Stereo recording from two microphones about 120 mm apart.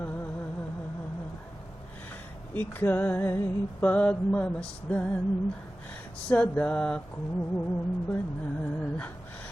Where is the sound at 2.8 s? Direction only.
15° left (ahead or behind).